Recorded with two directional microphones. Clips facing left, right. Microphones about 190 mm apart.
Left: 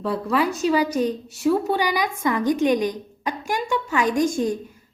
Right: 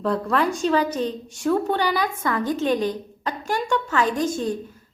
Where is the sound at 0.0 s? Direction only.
5° left (ahead or behind).